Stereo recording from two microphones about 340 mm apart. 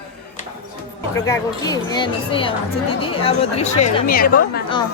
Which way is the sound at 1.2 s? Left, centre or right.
Centre.